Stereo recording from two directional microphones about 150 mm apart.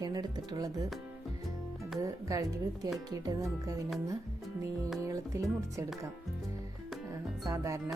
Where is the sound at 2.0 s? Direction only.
20° right (ahead or behind).